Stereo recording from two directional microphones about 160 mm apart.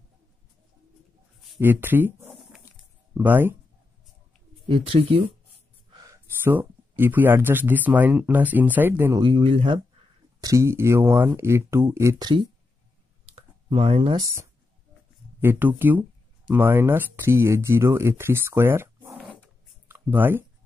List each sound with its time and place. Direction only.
1.6 s speech: 10° right (ahead or behind)
4.6 s speech: 35° right (ahead or behind)
6.4 s speech: 15° right (ahead or behind)
9.2 s speech: 35° right (ahead or behind)
10.4 s speech: 20° right (ahead or behind)
13.3 s a sound: 40° right (ahead or behind)
15.4 s speech: 10° right (ahead or behind)